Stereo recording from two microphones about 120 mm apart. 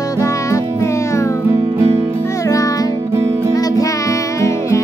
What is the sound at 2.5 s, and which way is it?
Music, 30° left (ahead or behind).